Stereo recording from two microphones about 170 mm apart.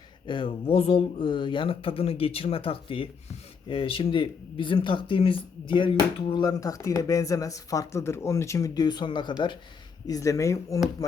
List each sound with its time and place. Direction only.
0.3 s speech: 30° left (ahead or behind)